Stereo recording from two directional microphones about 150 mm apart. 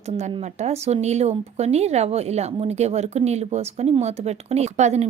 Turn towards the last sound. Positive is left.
turn(degrees=-50)  # may be behind; listen again after turning